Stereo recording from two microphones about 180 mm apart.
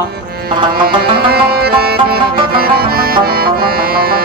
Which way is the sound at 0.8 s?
60° right (ahead or behind).